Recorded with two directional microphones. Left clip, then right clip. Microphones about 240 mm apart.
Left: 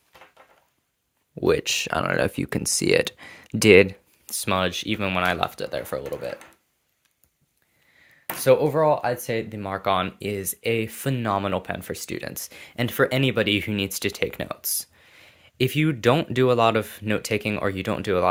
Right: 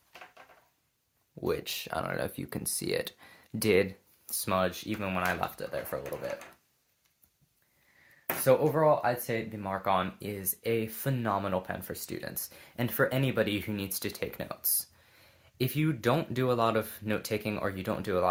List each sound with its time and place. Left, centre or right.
1.4 s speech: left
8.4 s speech: left